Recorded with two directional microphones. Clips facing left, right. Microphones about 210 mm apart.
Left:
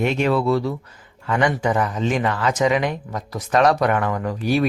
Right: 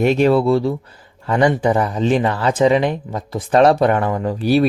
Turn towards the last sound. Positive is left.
turn(degrees=-35)  # may be behind; listen again after turning